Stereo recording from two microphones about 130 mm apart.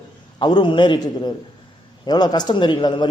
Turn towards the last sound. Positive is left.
turn(degrees=35)  # may be behind; listen again after turning